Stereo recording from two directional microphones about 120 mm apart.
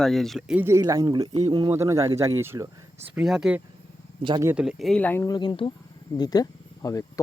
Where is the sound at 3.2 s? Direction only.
5° right (ahead or behind).